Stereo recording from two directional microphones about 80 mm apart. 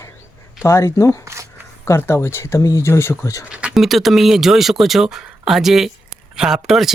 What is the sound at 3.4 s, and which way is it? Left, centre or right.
Speech, centre.